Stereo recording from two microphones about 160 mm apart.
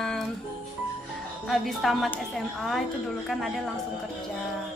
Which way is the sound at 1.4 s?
Centre (ahead or behind).